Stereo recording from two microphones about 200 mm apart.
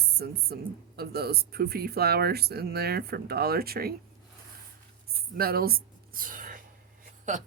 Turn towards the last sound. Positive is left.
turn(degrees=-40)  # may be behind; listen again after turning